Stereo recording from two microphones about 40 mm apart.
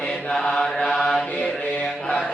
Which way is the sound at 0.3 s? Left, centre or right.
Centre.